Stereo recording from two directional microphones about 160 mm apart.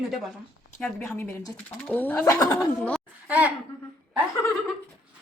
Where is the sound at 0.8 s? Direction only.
15° left (ahead or behind).